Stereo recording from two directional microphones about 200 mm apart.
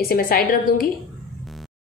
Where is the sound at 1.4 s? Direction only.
Centre (ahead or behind).